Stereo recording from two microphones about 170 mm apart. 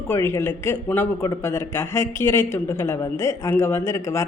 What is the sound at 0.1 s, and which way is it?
Speech, 15° left (ahead or behind).